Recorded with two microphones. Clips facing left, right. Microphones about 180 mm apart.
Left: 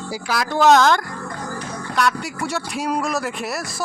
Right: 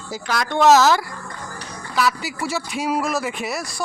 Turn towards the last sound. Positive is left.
turn(degrees=0)  # may be behind; listen again after turning